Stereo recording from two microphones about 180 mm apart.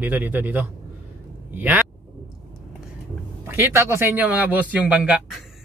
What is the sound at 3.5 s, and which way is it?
Speech, 15° right (ahead or behind).